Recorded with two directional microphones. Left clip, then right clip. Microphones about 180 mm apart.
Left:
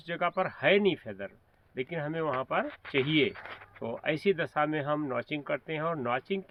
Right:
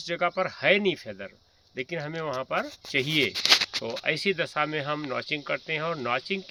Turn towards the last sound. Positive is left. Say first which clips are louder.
# right 3 dB
turn(degrees=-15)  # may be behind; listen again after turning